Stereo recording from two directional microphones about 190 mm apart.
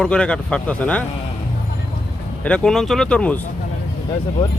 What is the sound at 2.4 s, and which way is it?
Speech, 5° left (ahead or behind).